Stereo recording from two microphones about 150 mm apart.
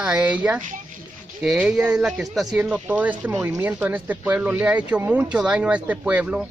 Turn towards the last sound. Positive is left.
turn(degrees=-10)  # may be behind; listen again after turning